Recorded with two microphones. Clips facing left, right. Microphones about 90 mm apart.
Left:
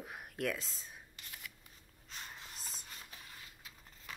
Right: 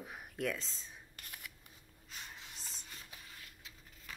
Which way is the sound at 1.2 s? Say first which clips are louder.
Right 1 dB; 50° right (ahead or behind).